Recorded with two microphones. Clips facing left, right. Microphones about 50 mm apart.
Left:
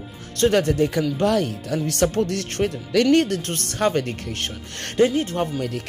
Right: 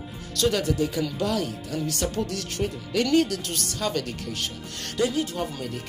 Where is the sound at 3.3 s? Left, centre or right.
Left.